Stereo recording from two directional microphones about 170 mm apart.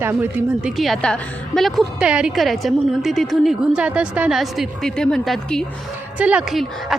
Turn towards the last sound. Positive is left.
turn(degrees=0)  # may be behind; listen again after turning